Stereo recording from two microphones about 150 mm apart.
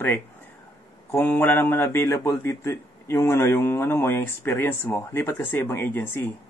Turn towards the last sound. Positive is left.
turn(degrees=15)  # may be behind; listen again after turning